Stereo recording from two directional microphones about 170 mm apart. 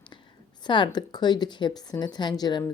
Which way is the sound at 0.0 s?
30° left (ahead or behind).